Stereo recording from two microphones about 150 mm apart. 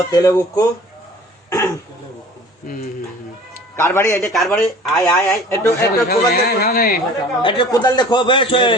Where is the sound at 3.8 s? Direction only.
15° left (ahead or behind).